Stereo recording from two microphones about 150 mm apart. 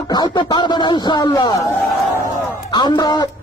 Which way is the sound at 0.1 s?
30° left (ahead or behind).